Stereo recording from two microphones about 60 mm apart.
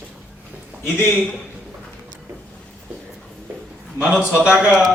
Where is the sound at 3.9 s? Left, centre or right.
Right.